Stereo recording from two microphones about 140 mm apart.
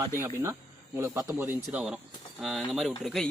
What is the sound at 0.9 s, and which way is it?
A man's voice, 20° right (ahead or behind).